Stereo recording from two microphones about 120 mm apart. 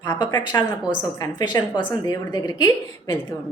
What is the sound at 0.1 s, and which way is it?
A woman's voice, 35° left (ahead or behind).